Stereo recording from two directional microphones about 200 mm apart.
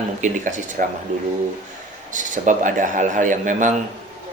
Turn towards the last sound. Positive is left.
turn(degrees=-40)  # may be behind; listen again after turning